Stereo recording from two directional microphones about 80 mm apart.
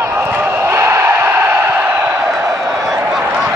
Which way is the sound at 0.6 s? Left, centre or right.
Right.